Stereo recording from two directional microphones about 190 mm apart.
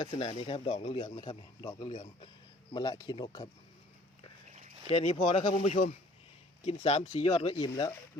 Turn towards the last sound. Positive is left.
turn(degrees=15)  # may be behind; listen again after turning